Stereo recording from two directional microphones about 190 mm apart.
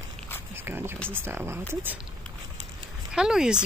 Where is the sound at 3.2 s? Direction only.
5° right (ahead or behind).